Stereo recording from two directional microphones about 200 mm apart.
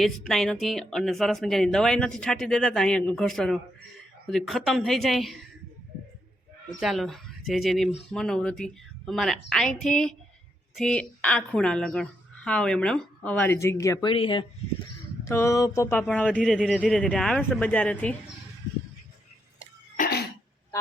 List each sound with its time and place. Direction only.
0.0 s a woman's voice: centre (ahead or behind)
6.7 s a woman's voice: centre (ahead or behind); by 14.4 s 25° left (ahead or behind)
15.2 s speech: 15° left (ahead or behind)
20.0 s cough: 50° left (ahead or behind)